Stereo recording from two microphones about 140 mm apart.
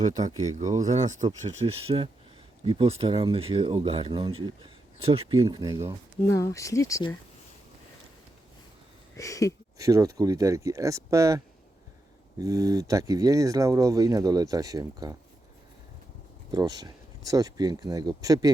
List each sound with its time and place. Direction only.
0.0 s speech: 60° right (ahead or behind); by 5.8 s 30° right (ahead or behind)
6.2 s speech: 20° left (ahead or behind)
9.1 s speech: 25° left (ahead or behind)
9.7 s speech: 25° right (ahead or behind)
16.5 s speech: 30° right (ahead or behind)